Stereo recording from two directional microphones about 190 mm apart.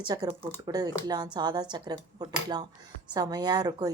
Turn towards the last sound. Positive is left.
turn(degrees=-20)  # may be behind; listen again after turning